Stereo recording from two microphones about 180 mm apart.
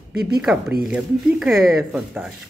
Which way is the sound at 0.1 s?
60° right (ahead or behind).